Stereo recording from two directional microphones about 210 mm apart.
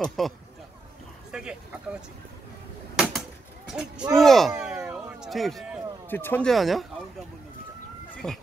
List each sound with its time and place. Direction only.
0.0 s speech: centre (ahead or behind)
1.3 s speech: 5° right (ahead or behind)
3.0 s a sound: centre (ahead or behind)
3.7 s speech: 5° right (ahead or behind)
8.2 s speech: centre (ahead or behind)